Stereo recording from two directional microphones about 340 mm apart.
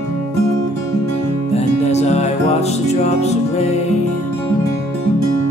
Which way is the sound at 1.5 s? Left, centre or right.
Centre.